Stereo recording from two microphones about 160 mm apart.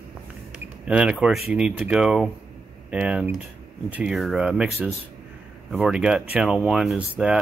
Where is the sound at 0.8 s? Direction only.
5° right (ahead or behind).